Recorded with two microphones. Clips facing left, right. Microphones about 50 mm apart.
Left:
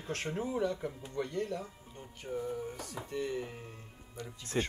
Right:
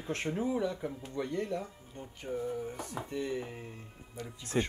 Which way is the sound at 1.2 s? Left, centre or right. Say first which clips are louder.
Right 1 dB; right.